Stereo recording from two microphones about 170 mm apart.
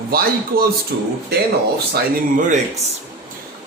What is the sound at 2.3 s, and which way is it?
Speech, 50° right (ahead or behind).